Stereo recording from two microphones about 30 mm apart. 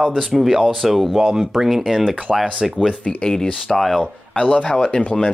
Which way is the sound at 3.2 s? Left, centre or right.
Centre.